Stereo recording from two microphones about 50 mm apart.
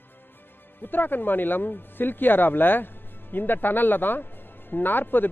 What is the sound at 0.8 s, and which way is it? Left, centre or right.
Speech, left.